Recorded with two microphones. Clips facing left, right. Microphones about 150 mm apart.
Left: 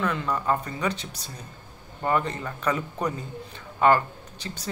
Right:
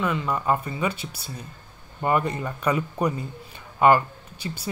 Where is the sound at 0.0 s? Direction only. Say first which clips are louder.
Right 1 dB; 5° right (ahead or behind).